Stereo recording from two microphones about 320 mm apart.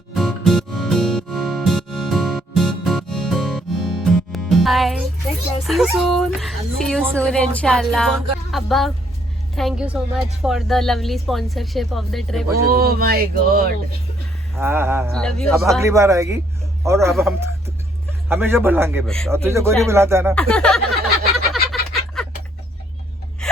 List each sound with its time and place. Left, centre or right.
0.1 s music: centre
5.6 s speech: centre
12.6 s a sound: right
14.5 s a man's voice: centre
15.6 s a man's voice: centre
20.3 s speech: centre
21.5 s a sound: centre